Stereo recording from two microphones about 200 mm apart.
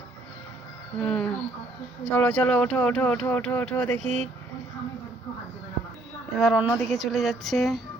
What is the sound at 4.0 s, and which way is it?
Speech, 35° right (ahead or behind).